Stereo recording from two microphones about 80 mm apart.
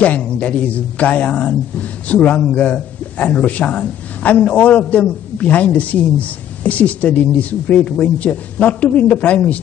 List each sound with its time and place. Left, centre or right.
0.0 s speech: centre